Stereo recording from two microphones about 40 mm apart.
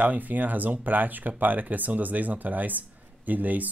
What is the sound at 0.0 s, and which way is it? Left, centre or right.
Speech, right.